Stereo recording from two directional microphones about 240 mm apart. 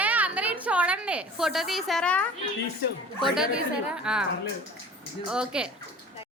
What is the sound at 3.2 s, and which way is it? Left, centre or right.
A woman's voice, centre.